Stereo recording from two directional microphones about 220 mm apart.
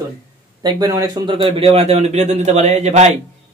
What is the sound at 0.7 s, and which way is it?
A man's voice, 15° right (ahead or behind).